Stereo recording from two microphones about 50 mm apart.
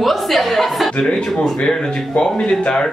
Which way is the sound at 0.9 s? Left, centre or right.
Centre.